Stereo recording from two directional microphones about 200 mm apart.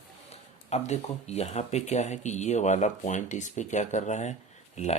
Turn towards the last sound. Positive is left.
turn(degrees=35)  # may be behind; listen again after turning